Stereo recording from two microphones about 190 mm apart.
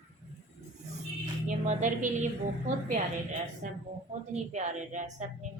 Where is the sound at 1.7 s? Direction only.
40° right (ahead or behind).